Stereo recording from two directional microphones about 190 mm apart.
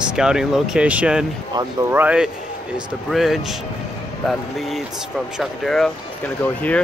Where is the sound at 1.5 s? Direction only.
25° right (ahead or behind).